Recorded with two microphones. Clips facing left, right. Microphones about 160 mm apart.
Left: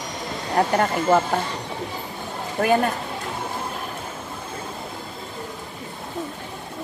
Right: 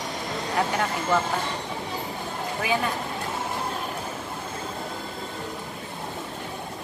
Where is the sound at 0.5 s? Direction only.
45° left (ahead or behind).